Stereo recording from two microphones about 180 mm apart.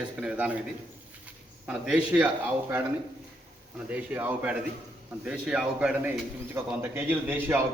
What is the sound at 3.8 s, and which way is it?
A man's voice, 10° right (ahead or behind).